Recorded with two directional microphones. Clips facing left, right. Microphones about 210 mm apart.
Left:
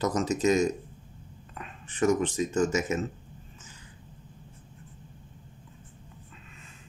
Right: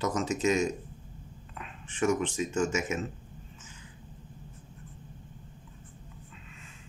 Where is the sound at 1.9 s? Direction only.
40° left (ahead or behind).